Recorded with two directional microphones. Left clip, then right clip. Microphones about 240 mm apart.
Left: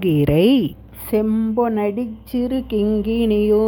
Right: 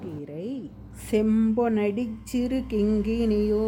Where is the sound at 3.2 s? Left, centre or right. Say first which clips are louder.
Left 9 dB; left.